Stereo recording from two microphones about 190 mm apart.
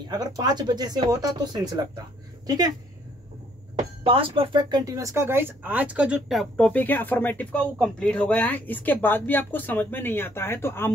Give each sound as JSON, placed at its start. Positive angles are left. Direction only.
{"t": 0.1, "sound": "speech", "side_deg": -20}
{"t": 3.7, "sound": "speech", "side_deg": -30}